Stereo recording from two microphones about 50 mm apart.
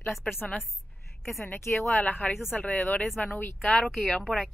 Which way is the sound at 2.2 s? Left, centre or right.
Left.